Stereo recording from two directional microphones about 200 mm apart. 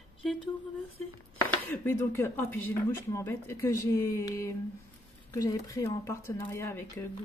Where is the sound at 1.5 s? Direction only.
10° left (ahead or behind).